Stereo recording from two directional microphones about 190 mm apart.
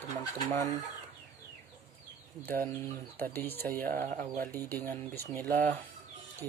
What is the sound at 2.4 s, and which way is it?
Speech, 10° left (ahead or behind).